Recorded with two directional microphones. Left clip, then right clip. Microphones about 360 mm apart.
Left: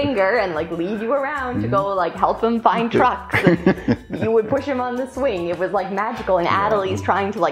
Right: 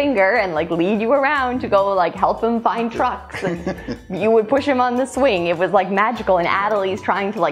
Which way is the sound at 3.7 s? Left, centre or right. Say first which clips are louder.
Left 7 dB; left.